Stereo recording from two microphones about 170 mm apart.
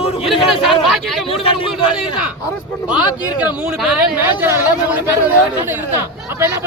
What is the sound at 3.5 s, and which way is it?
Speech, 5° right (ahead or behind).